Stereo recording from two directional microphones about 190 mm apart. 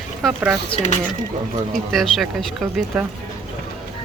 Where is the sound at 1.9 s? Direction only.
Centre (ahead or behind).